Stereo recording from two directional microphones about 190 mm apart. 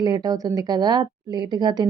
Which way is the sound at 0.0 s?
20° right (ahead or behind).